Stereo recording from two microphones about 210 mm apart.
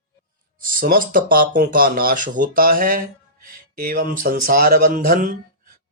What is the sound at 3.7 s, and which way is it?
Music, 45° right (ahead or behind).